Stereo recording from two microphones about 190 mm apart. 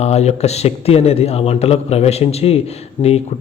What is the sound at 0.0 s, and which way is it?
Speech, 35° left (ahead or behind).